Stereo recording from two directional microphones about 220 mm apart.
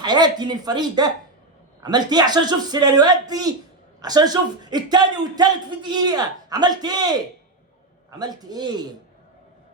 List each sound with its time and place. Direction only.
0.0 s speech: 20° right (ahead or behind)